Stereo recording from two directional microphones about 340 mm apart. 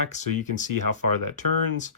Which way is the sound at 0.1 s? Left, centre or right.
Left.